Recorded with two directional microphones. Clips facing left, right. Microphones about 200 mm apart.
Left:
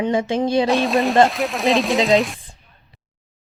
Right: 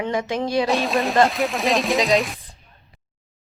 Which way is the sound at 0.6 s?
Centre (ahead or behind).